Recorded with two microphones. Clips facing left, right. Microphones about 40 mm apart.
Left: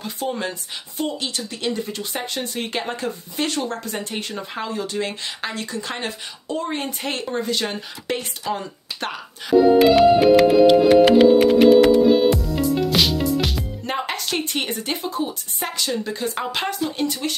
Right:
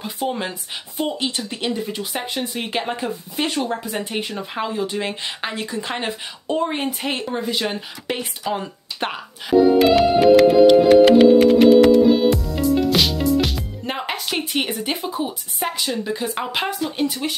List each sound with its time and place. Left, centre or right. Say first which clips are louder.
0.0 s speech: right 1 dB; centre
6.9 s speech: right 2 dB; centre
9.8 s music: left 1 dB; centre